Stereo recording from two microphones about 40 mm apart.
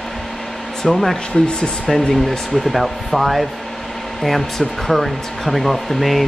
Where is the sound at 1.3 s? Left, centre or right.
Centre.